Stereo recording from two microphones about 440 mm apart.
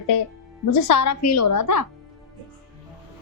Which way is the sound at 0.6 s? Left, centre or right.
Left.